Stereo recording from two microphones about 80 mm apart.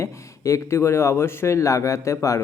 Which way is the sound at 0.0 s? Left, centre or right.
Left.